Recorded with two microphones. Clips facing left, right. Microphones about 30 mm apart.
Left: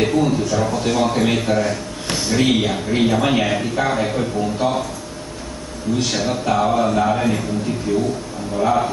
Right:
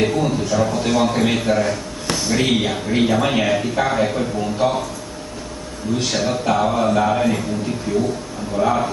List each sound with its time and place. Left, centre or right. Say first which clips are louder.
0.0 s speech: left 1 dB; centre
2.0 s a sound: right 1 dB; centre
2.3 s speech: left 2 dB; centre
5.9 s speech: right 1 dB; centre